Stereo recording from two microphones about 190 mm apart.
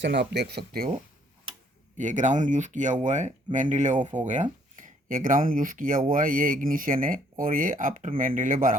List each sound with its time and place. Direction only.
0.0 s speech: 65° right (ahead or behind)
2.0 s speech: 40° right (ahead or behind)